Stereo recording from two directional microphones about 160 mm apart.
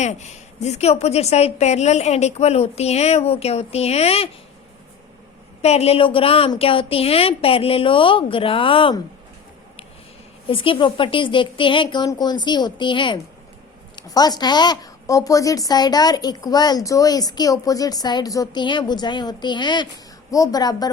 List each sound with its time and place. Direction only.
0.0 s a woman's voice: 45° left (ahead or behind)
5.6 s a woman's voice: 40° left (ahead or behind)
10.4 s a woman's voice: 35° left (ahead or behind)